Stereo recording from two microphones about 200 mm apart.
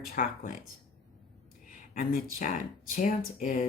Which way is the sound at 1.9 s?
45° left (ahead or behind).